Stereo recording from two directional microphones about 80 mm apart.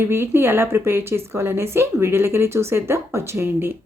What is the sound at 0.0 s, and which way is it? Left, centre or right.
A woman's voice, right.